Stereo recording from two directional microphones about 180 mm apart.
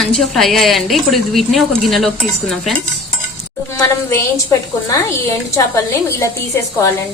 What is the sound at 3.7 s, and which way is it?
Speech, 15° left (ahead or behind).